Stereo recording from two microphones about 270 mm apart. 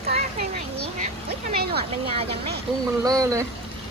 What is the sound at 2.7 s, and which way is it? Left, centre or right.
Speech, centre.